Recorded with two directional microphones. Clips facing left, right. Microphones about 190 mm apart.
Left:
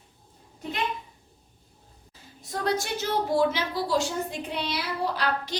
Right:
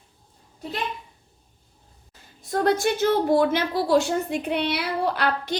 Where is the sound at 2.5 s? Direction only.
55° right (ahead or behind).